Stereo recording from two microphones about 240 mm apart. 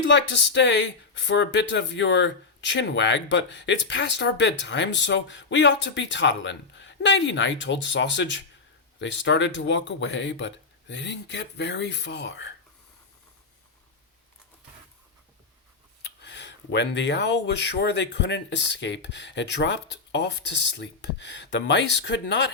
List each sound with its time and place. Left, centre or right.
0.1 s speech: left
16.2 s speech: left
21.5 s speech: left